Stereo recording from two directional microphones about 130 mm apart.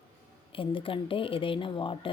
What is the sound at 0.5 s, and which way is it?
Speech, 40° left (ahead or behind).